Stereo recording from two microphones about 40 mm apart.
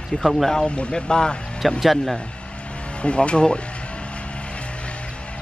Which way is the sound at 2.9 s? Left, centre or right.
Left.